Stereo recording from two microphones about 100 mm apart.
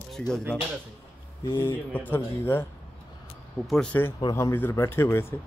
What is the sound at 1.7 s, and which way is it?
Speech, 20° left (ahead or behind).